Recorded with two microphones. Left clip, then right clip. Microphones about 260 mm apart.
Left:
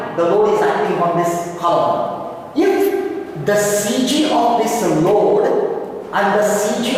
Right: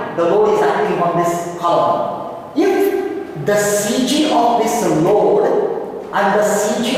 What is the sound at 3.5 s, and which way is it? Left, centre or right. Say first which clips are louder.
A woman's voice: right 1 dB; centre.